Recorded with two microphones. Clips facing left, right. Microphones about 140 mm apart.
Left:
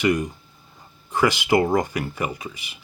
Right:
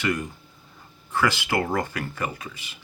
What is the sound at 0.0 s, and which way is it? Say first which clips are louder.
Speech: left 6 dB; 15° left (ahead or behind).